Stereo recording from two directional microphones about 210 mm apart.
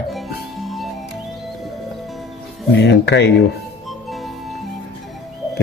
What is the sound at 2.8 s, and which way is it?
Speech, 55° left (ahead or behind).